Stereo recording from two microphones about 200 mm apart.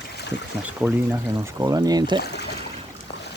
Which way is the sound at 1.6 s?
20° right (ahead or behind).